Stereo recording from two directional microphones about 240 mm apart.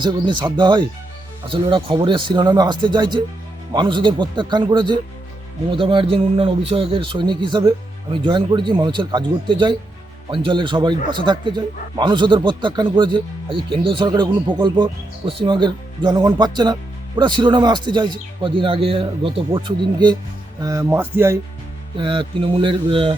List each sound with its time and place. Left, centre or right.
0.0 s a man's voice: centre